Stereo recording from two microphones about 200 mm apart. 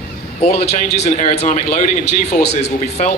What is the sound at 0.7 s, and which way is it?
Speech, 35° left (ahead or behind).